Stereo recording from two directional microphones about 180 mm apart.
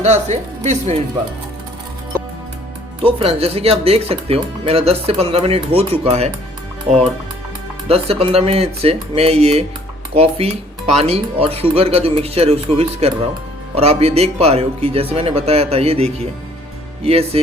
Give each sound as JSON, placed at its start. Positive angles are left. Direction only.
{"t": 0.0, "sound": "speech", "side_deg": -40}
{"t": 3.0, "sound": "speech", "side_deg": -30}
{"t": 7.9, "sound": "speech", "side_deg": -35}